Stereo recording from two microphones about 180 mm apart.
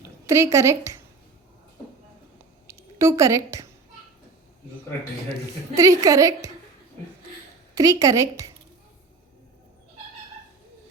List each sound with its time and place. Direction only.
0.3 s a woman's voice: 15° right (ahead or behind)
2.6 s a woman's voice: 15° right (ahead or behind)
5.7 s a woman's voice: 15° right (ahead or behind)
7.8 s a woman's voice: 20° right (ahead or behind)